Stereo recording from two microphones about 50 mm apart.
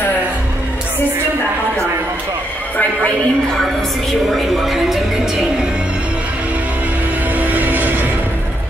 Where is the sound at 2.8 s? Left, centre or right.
Left.